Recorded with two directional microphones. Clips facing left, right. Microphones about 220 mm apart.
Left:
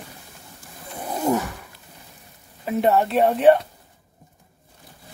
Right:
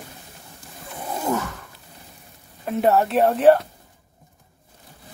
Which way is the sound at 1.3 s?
15° left (ahead or behind).